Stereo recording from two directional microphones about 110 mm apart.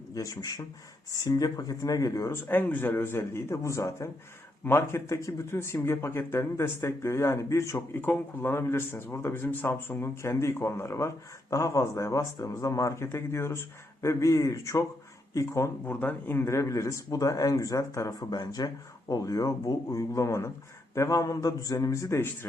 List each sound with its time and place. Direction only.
0.1 s speech: 30° left (ahead or behind)
15.9 s speech: 15° left (ahead or behind)